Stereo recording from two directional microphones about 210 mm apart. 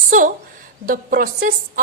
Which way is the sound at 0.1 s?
40° right (ahead or behind).